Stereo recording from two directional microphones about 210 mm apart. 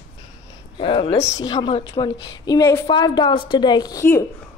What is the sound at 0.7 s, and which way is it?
A woman's voice, 25° left (ahead or behind).